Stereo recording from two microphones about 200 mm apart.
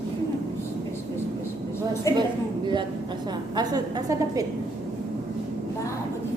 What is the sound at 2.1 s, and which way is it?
Speech, 15° left (ahead or behind).